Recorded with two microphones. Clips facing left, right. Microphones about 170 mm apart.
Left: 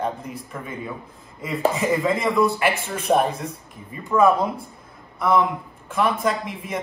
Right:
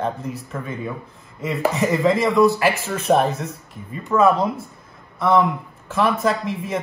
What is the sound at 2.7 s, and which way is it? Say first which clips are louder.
Speech: right 3 dB; 30° left (ahead or behind).